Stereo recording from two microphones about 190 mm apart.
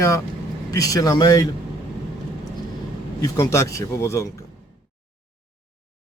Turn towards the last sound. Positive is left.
turn(degrees=15)  # may be behind; listen again after turning